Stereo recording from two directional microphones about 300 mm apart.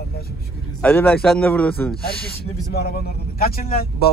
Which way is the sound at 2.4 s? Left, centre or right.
Left.